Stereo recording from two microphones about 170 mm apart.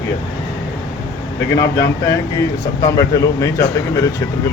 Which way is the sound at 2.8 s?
20° left (ahead or behind).